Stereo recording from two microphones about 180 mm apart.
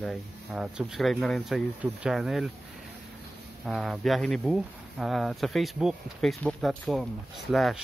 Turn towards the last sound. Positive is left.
turn(degrees=0)  # may be behind; listen again after turning